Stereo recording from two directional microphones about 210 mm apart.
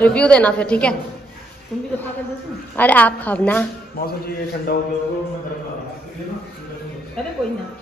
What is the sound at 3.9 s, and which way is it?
Speech, 45° left (ahead or behind).